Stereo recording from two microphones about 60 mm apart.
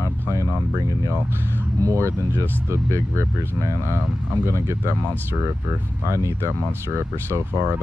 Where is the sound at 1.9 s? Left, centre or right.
Right.